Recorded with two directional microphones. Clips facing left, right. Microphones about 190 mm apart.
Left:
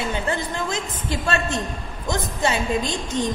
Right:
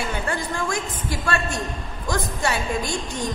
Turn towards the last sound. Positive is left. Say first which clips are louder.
# left 3 dB
turn(degrees=20)  # may be behind; listen again after turning